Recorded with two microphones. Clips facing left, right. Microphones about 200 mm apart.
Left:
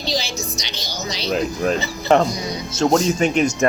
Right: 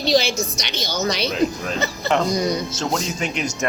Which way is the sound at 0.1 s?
60° right (ahead or behind).